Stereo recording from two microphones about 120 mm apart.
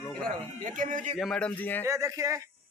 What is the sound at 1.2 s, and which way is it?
Speech, 5° left (ahead or behind).